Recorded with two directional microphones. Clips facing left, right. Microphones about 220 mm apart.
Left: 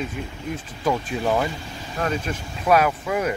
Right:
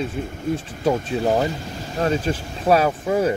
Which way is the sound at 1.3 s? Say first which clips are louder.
Right 3 dB; 40° right (ahead or behind).